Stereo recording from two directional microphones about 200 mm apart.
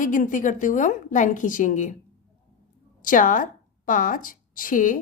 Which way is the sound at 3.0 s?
40° left (ahead or behind).